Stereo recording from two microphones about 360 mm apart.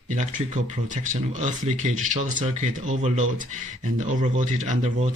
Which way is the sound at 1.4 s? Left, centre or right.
Centre.